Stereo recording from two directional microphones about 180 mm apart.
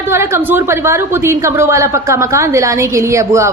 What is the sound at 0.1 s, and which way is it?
A woman's voice, 15° right (ahead or behind).